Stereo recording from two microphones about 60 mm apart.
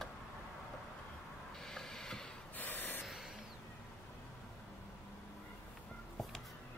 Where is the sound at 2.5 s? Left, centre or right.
Left.